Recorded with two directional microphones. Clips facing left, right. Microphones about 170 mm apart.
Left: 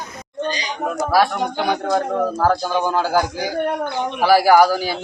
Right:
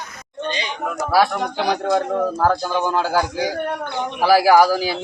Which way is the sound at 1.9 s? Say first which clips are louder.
Even; centre (ahead or behind).